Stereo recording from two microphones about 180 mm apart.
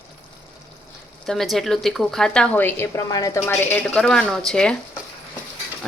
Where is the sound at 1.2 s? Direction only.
Centre (ahead or behind).